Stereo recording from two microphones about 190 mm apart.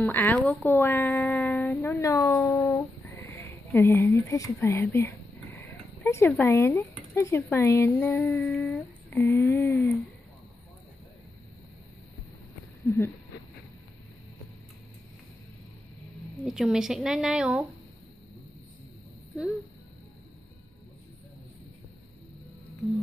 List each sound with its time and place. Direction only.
0.0 s speech: 10° left (ahead or behind)
1.8 s speech: 15° left (ahead or behind)
9.1 s speech: 15° left (ahead or behind)
12.8 s speech: 15° left (ahead or behind)
16.4 s speech: 5° right (ahead or behind)
19.3 s speech: centre (ahead or behind)